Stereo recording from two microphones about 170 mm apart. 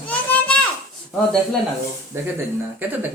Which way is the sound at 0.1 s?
10° left (ahead or behind).